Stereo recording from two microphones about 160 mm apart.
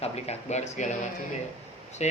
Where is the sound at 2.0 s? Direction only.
45° left (ahead or behind).